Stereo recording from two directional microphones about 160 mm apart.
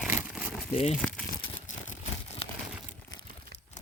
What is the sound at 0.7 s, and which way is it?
Speech, 40° left (ahead or behind).